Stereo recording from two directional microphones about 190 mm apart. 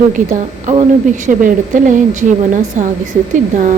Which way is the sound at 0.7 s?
40° right (ahead or behind).